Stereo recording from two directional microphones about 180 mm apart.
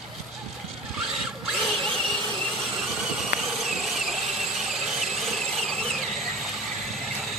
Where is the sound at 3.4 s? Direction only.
Centre (ahead or behind).